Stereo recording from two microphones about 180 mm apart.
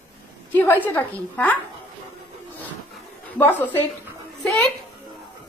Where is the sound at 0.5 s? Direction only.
10° left (ahead or behind).